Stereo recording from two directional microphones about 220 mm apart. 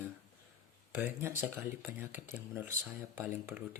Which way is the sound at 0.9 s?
10° right (ahead or behind).